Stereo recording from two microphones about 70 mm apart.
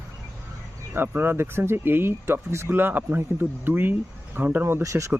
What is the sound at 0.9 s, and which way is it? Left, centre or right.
Speech, right.